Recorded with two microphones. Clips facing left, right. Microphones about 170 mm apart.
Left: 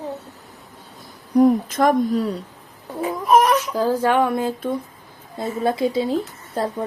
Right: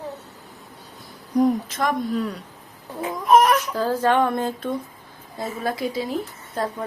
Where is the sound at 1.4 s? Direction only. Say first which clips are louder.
Left 5 dB; 50° left (ahead or behind).